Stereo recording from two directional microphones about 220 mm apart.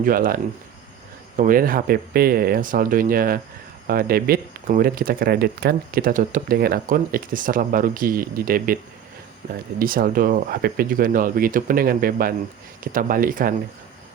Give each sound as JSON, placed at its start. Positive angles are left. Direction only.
{"t": 0.0, "sound": "speech", "side_deg": -40}
{"t": 1.4, "sound": "speech", "side_deg": -40}